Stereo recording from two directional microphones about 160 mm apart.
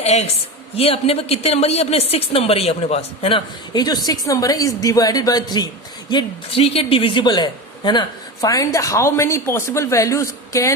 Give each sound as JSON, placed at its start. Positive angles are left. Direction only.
{"t": 0.0, "sound": "a woman's voice", "side_deg": 45}